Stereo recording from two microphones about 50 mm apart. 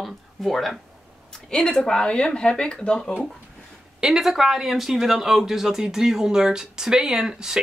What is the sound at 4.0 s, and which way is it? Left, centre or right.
Speech, centre.